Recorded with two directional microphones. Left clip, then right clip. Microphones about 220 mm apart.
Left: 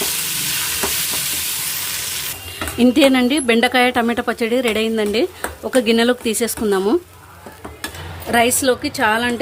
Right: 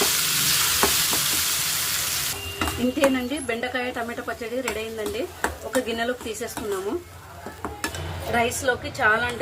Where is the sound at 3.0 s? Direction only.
50° left (ahead or behind).